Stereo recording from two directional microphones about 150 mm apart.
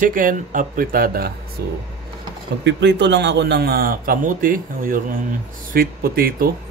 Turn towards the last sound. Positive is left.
turn(degrees=-80)